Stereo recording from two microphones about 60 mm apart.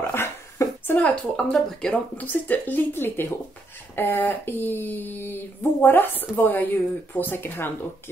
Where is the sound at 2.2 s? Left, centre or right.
Left.